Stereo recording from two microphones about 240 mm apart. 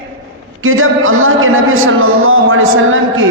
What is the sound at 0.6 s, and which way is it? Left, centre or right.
A man's voice, right.